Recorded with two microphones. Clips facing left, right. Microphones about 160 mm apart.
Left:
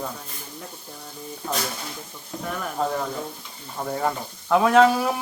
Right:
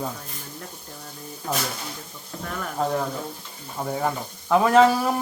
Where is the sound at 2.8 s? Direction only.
Centre (ahead or behind).